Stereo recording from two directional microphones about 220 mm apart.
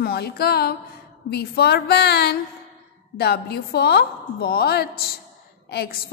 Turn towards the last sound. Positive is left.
turn(degrees=45)  # may be behind; listen again after turning